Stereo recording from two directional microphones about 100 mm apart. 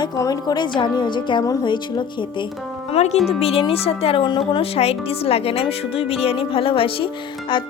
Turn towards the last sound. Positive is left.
turn(degrees=55)  # may be behind; listen again after turning